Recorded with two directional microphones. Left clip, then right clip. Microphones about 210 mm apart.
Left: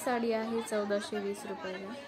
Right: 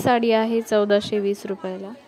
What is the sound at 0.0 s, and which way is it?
A woman's voice, 40° right (ahead or behind).